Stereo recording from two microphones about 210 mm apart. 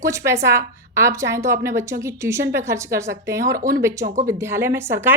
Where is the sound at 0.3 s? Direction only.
15° right (ahead or behind).